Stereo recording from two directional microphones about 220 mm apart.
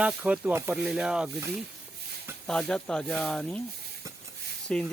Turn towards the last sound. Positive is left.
turn(degrees=5)  # may be behind; listen again after turning